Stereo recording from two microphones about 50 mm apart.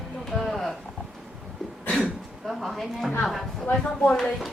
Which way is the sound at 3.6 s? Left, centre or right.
Centre.